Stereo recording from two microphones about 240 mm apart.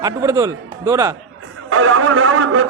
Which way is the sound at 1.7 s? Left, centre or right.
Right.